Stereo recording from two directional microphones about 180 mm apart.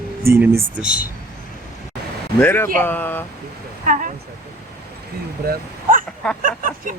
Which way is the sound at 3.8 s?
45° right (ahead or behind).